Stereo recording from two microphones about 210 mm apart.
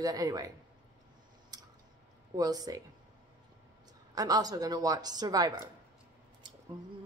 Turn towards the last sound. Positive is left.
turn(degrees=-20)  # may be behind; listen again after turning